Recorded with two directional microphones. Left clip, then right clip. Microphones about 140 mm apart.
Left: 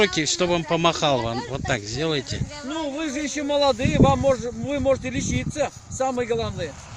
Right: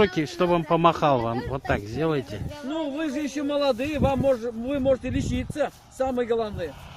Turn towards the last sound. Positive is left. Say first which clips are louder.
# left 1 dB
turn(degrees=-65)  # may be behind; listen again after turning